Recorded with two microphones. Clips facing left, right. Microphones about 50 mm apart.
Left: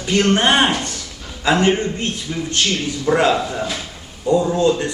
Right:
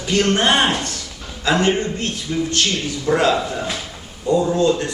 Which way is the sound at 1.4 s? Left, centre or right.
Centre.